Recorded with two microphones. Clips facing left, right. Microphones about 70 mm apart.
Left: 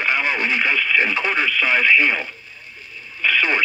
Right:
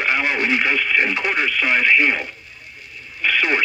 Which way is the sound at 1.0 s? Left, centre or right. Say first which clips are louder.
Even; right.